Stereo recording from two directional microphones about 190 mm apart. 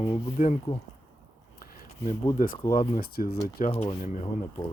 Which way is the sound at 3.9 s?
50° left (ahead or behind).